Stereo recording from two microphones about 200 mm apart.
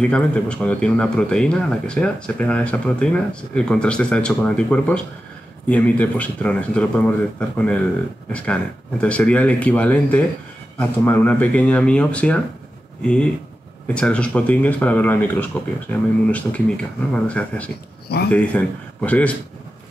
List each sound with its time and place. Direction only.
0.0 s speech: 5° left (ahead or behind)
18.0 s speech: 55° left (ahead or behind)
18.3 s speech: 5° left (ahead or behind)